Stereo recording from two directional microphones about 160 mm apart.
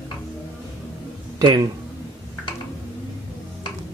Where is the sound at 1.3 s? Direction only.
25° right (ahead or behind).